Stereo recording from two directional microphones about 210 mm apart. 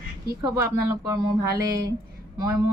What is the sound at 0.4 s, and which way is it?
Speech, 15° right (ahead or behind).